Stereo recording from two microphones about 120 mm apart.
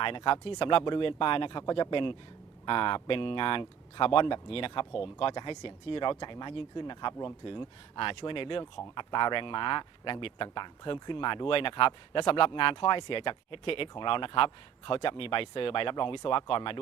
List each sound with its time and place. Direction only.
0.0 s speech: 45° left (ahead or behind)